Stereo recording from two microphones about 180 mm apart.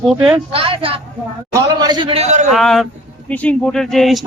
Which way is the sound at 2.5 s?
Centre (ahead or behind).